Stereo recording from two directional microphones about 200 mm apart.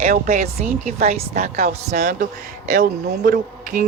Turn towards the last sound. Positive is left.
turn(degrees=-40)  # may be behind; listen again after turning